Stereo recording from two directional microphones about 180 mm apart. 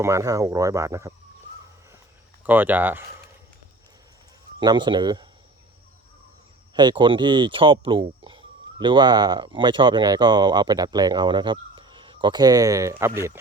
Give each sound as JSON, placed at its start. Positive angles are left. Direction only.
{"t": 0.0, "sound": "speech", "side_deg": -15}
{"t": 2.5, "sound": "speech", "side_deg": -10}
{"t": 4.6, "sound": "speech", "side_deg": -25}
{"t": 6.7, "sound": "speech", "side_deg": -25}